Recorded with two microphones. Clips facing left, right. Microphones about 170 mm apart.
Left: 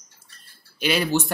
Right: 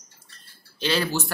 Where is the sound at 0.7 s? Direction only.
15° left (ahead or behind).